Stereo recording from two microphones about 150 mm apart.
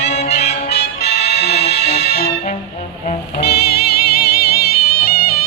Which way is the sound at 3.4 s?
90° left.